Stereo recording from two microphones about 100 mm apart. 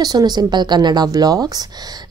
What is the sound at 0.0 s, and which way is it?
Speech, 40° right (ahead or behind).